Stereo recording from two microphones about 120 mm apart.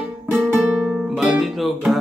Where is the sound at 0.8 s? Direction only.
5° right (ahead or behind).